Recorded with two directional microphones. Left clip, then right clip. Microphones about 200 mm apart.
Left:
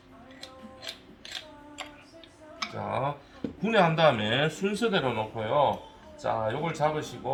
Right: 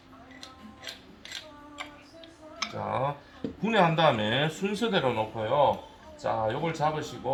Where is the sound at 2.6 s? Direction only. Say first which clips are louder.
Right 1 dB; 5° right (ahead or behind).